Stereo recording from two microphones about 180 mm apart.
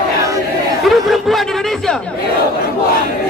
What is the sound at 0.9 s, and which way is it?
Speech, centre (ahead or behind).